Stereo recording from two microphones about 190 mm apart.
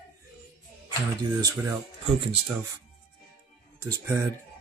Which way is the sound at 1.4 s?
20° right (ahead or behind).